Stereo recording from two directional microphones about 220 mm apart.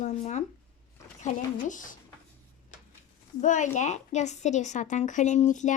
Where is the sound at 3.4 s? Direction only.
35° left (ahead or behind).